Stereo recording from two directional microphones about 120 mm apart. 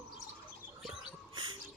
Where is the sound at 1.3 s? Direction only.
40° right (ahead or behind).